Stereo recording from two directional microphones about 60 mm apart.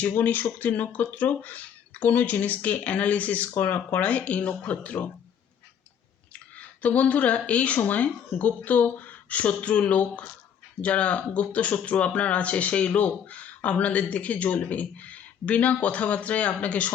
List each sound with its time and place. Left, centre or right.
0.0 s speech: left
3.5 s speech: left
3.9 s speech: left
6.8 s speech: left